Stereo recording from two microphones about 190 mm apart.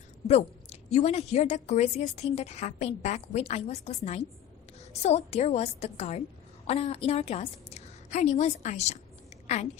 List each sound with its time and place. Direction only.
0.3 s a woman's voice: 35° left (ahead or behind)